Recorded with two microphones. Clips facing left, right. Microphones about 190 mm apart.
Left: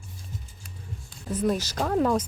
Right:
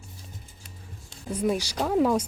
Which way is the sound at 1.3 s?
10° right (ahead or behind).